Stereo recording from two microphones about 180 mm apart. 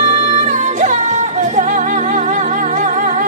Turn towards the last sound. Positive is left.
turn(degrees=-45)  # may be behind; listen again after turning